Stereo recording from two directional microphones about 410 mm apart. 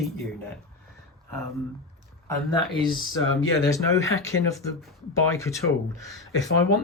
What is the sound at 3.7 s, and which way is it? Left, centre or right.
Speech, centre.